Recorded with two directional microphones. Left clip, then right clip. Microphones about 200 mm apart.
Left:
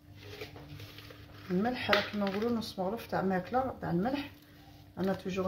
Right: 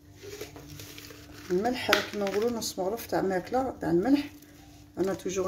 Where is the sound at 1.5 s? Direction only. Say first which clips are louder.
Right 4 dB; 55° right (ahead or behind).